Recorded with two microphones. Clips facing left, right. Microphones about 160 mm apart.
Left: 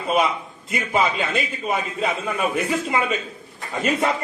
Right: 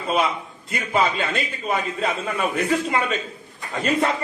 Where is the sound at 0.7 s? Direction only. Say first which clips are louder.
Even; centre (ahead or behind).